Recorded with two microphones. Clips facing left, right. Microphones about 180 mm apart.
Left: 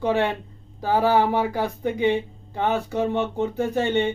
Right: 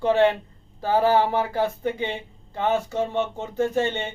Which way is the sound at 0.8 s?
15° left (ahead or behind).